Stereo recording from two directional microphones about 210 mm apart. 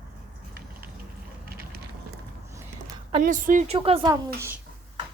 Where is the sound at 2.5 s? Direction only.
15° right (ahead or behind).